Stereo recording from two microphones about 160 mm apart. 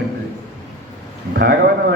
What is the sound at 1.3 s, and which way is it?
Speech, 90° right.